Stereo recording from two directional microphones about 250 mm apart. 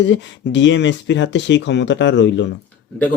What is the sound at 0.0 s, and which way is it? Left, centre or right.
Speech, left.